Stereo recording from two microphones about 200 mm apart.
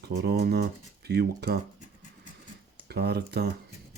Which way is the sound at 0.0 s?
55° right (ahead or behind).